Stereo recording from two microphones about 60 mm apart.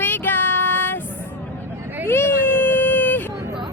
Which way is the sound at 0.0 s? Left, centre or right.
Left.